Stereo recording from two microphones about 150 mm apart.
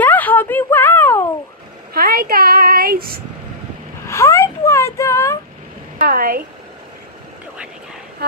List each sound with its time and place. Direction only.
0.0 s a sound: 10° left (ahead or behind)
2.0 s a child's voice: 90° right
4.1 s speech: 20° left (ahead or behind)
5.9 s speech: 75° right (ahead or behind)